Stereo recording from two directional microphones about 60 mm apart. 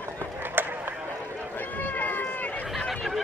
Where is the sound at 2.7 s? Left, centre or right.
Centre.